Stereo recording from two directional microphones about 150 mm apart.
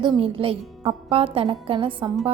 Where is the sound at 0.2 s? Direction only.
35° right (ahead or behind).